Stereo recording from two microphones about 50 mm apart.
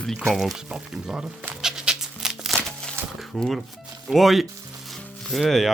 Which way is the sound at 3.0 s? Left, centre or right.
Right.